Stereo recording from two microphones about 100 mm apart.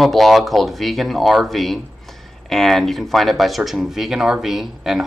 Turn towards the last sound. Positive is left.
turn(degrees=0)  # may be behind; listen again after turning